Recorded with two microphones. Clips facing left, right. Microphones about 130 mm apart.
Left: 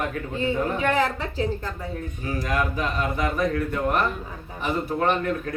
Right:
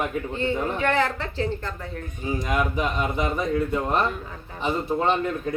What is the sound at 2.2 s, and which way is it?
A man's voice, 25° right (ahead or behind).